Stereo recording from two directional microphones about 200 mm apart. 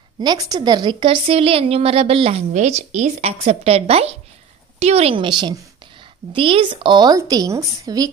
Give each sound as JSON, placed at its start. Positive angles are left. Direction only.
{"t": 0.2, "sound": "a woman's voice", "side_deg": -20}